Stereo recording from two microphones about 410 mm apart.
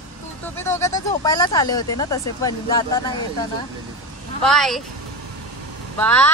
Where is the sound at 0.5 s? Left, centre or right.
Centre.